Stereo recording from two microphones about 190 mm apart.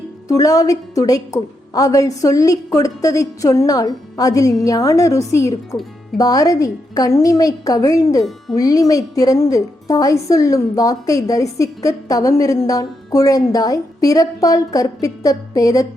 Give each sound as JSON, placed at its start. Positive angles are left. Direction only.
{"t": 0.3, "sound": "a woman's voice", "side_deg": 20}